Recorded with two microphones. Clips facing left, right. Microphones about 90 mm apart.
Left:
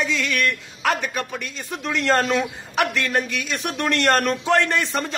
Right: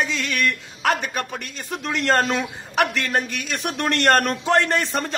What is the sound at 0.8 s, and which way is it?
Speech, 45° right (ahead or behind).